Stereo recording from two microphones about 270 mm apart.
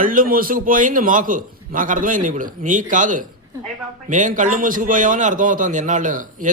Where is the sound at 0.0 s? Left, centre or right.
Right.